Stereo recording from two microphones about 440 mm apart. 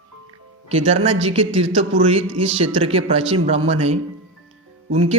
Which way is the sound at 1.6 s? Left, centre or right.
Right.